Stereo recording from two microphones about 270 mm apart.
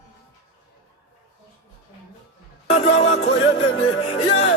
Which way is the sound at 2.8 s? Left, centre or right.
Left.